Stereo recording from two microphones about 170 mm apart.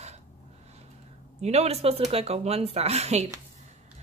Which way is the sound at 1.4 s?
40° right (ahead or behind).